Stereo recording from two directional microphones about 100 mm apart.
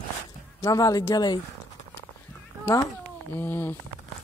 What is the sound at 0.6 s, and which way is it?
Speech, 35° left (ahead or behind).